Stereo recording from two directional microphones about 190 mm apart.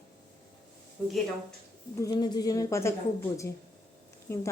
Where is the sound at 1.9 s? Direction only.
20° left (ahead or behind).